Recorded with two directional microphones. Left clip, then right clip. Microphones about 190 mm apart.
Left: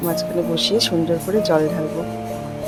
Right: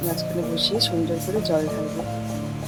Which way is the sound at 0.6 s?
20° left (ahead or behind).